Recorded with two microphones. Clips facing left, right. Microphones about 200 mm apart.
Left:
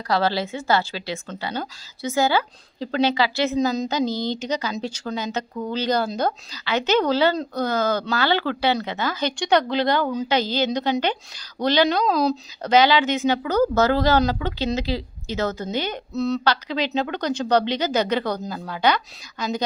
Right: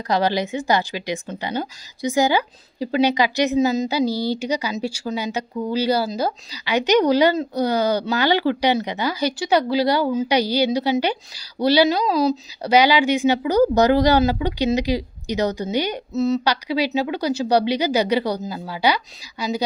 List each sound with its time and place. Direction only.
0.1 s a woman's voice: 15° right (ahead or behind)
16.1 s a woman's voice: centre (ahead or behind)